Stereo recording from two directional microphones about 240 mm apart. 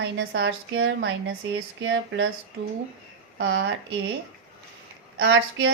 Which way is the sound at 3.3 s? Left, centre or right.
Right.